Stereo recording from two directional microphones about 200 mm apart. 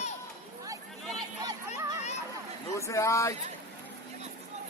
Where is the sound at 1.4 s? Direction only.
20° right (ahead or behind).